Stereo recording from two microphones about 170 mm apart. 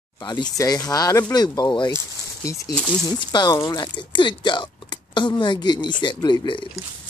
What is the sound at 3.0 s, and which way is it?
Speech, 25° left (ahead or behind).